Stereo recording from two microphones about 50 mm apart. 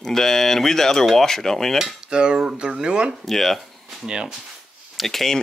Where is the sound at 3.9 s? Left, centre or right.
Centre.